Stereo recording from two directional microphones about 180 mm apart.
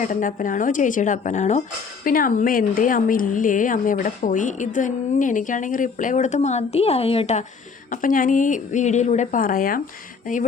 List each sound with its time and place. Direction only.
0.0 s a woman's voice: 45° left (ahead or behind)
2.0 s a woman's voice: 50° left (ahead or behind); by 7.4 s 35° left (ahead or behind)
7.9 s a woman's voice: 50° left (ahead or behind)